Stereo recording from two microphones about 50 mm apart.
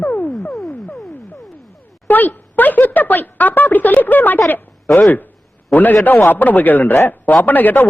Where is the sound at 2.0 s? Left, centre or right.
Left.